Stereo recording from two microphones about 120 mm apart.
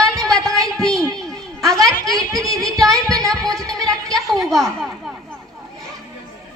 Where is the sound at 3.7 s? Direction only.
30° right (ahead or behind).